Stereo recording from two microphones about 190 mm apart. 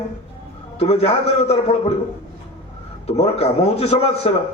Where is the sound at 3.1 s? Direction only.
35° left (ahead or behind).